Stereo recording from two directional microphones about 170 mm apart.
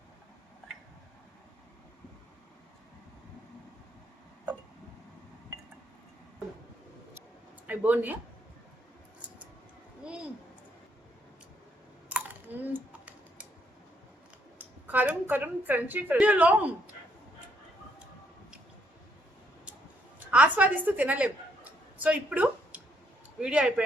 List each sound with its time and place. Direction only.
7.7 s speech: 10° right (ahead or behind)
10.0 s a sound: 5° right (ahead or behind)
12.0 s clicking: 10° right (ahead or behind)
14.6 s a woman's voice: 10° right (ahead or behind)
20.1 s a sound: 10° right (ahead or behind)
23.4 s speech: 5° right (ahead or behind)